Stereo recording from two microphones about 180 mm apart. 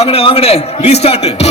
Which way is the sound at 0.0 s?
30° left (ahead or behind).